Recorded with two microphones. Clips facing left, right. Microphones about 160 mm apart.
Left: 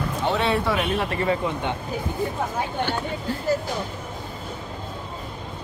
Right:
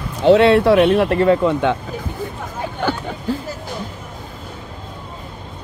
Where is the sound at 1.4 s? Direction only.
90° right.